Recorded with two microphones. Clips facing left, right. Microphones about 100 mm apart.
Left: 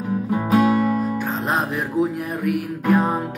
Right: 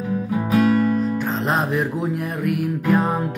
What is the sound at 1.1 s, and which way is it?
Music, centre (ahead or behind).